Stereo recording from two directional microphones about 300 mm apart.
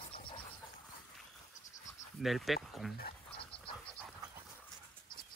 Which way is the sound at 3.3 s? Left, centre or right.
Centre.